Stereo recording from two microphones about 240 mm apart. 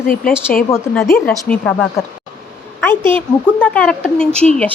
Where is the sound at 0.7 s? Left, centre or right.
Centre.